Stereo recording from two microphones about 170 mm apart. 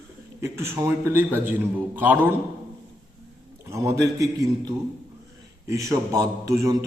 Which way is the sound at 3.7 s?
15° right (ahead or behind).